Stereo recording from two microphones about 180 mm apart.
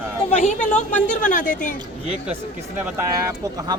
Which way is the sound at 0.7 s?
40° left (ahead or behind).